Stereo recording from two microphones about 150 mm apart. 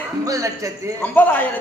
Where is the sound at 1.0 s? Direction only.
10° left (ahead or behind).